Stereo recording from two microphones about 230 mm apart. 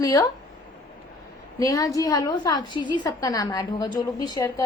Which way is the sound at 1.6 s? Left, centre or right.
Centre.